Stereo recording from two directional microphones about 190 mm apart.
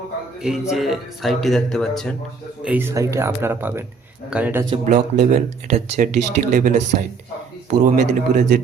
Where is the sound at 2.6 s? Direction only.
10° right (ahead or behind).